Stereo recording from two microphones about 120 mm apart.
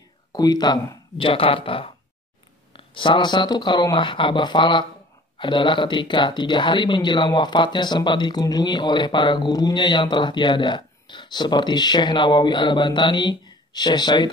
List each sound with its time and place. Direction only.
0.3 s speech: 35° left (ahead or behind)
1.1 s speech: 50° left (ahead or behind)